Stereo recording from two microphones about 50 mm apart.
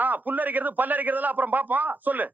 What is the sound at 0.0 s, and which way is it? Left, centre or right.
A woman's voice, right.